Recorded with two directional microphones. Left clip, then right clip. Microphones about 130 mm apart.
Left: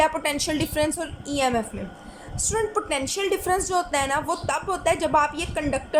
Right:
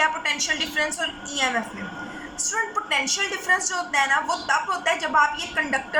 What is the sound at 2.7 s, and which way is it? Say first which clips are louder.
A woman's voice: right 2 dB; 25° left (ahead or behind).